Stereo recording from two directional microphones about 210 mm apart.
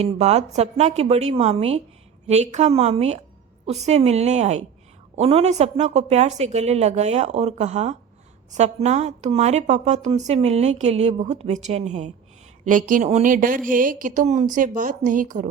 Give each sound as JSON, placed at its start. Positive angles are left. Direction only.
{"t": 0.0, "sound": "a woman's voice", "side_deg": -30}